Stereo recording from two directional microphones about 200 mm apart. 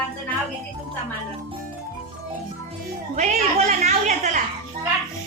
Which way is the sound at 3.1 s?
35° right (ahead or behind).